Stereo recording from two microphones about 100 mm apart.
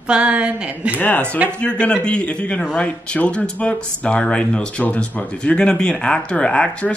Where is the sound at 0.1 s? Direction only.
10° right (ahead or behind).